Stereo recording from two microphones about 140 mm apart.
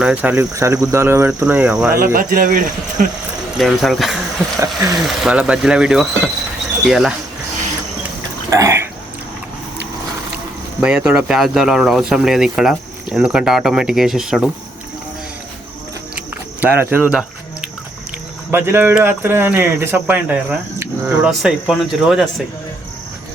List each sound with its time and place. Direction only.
0.0 s speech: 10° right (ahead or behind)
2.1 s speech: 85° right; by 3.1 s 70° right (ahead or behind)
3.6 s speech: centre (ahead or behind)
4.6 s speech: 20° right (ahead or behind)
5.0 s speech: 5° right (ahead or behind)
8.4 s a sound: 25° right (ahead or behind)
10.8 s speech: 5° right (ahead or behind)
16.6 s speech: 15° right (ahead or behind)
16.9 s music: 10° right (ahead or behind)
18.5 s speech: 15° right (ahead or behind)